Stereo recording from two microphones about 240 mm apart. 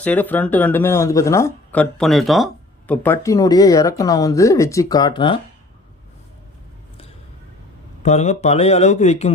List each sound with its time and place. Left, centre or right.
0.0 s speech: centre
8.0 s speech: left